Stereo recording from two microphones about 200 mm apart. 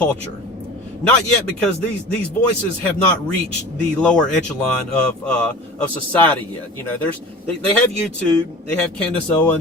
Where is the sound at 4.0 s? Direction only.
5° left (ahead or behind).